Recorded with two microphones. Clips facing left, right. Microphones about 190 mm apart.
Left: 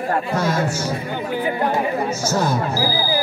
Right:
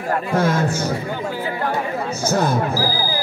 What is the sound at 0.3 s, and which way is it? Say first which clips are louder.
Speech: right 2 dB; 55° right (ahead or behind).